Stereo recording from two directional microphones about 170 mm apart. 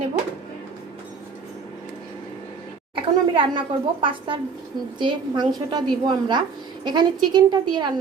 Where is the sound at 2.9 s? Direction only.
30° right (ahead or behind).